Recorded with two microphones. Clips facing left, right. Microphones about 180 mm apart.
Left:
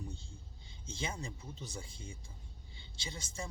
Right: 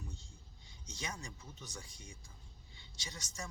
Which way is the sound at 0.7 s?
25° left (ahead or behind).